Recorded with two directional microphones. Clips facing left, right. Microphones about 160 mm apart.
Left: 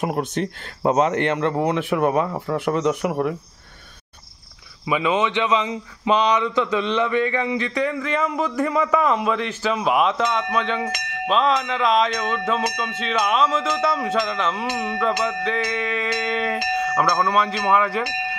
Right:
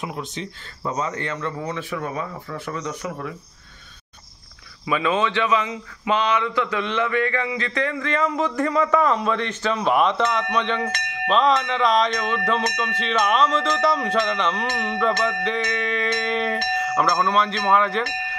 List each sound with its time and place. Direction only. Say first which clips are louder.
0.0 s speech: left 7 dB; 55° left (ahead or behind)
0.8 s speech: left 8 dB; 70° left (ahead or behind)
4.8 s speech: left 1 dB; 15° left (ahead or behind)